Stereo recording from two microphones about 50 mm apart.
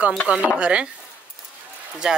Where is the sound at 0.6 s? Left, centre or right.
Right.